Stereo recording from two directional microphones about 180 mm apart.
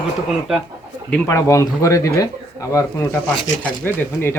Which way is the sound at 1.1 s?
10° left (ahead or behind).